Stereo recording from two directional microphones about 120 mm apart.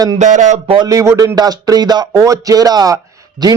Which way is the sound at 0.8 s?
25° right (ahead or behind).